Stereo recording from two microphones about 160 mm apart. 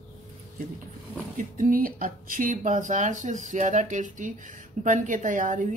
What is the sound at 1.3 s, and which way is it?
Speech, 55° right (ahead or behind).